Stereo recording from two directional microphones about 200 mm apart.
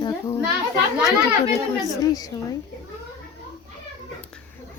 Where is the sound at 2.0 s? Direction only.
20° left (ahead or behind).